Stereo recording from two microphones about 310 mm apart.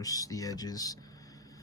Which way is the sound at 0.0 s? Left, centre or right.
Centre.